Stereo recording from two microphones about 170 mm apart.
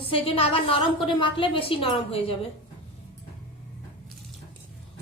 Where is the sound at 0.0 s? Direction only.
35° left (ahead or behind).